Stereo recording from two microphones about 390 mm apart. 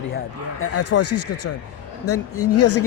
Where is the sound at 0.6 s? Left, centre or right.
Left.